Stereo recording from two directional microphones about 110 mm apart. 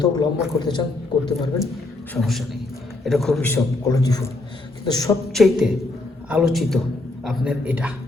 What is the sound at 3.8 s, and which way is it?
A man's voice, 35° left (ahead or behind).